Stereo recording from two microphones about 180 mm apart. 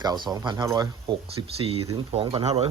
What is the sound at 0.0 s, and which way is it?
Speech, 20° right (ahead or behind).